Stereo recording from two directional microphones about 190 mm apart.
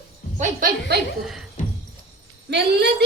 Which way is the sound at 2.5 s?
65° right (ahead or behind).